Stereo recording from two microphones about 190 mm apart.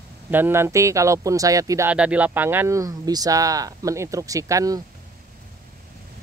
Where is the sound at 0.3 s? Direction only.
10° right (ahead or behind).